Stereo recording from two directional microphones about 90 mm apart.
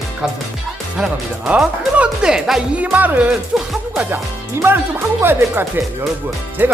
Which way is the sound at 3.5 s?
5° right (ahead or behind).